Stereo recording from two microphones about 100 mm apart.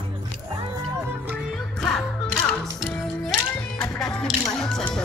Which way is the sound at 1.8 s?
10° left (ahead or behind).